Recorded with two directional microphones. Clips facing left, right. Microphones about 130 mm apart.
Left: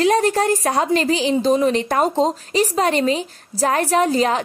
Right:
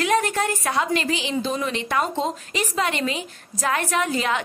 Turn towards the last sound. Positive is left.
turn(degrees=35)  # may be behind; listen again after turning